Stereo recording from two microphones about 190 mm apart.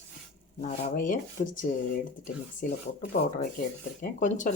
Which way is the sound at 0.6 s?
40° left (ahead or behind).